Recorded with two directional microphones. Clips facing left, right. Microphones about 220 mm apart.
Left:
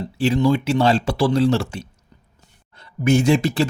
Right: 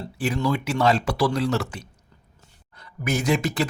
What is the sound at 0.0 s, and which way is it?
Speech, 20° left (ahead or behind).